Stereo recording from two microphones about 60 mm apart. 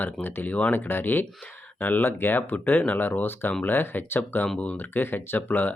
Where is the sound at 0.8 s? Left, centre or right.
Left.